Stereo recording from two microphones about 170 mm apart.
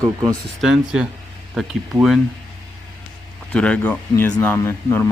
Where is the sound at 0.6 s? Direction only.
5° right (ahead or behind).